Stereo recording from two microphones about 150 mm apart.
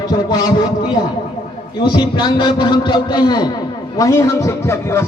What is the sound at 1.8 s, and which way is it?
A man's voice, 30° left (ahead or behind).